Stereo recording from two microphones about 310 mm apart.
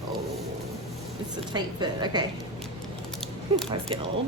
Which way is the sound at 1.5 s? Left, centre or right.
Centre.